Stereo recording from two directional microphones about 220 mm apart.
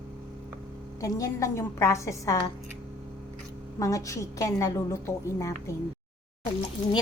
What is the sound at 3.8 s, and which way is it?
A woman's voice, 15° left (ahead or behind).